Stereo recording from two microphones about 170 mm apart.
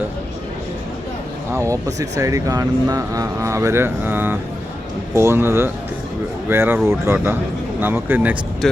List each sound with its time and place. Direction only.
1.5 s speech: 20° right (ahead or behind)
8.6 s speech: centre (ahead or behind)